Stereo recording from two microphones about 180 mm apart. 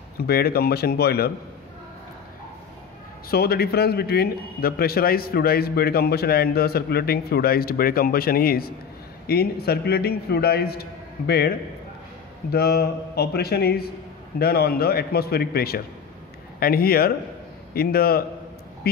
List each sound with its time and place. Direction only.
0.2 s a man's voice: 60° left (ahead or behind)
3.3 s a man's voice: 60° left (ahead or behind)